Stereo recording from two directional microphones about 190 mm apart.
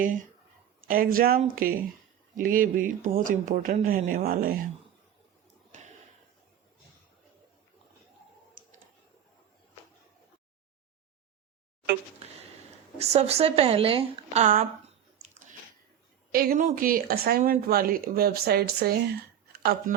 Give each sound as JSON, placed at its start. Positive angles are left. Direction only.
{"t": 0.0, "sound": "speech", "side_deg": -45}
{"t": 13.0, "sound": "a woman's voice", "side_deg": -35}
{"t": 16.3, "sound": "speech", "side_deg": -50}